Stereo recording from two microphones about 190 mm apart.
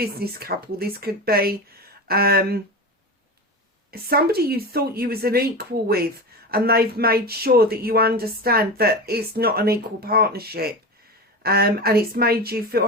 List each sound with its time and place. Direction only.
0.0 s a woman's voice: 55° right (ahead or behind)
3.9 s a woman's voice: 55° right (ahead or behind)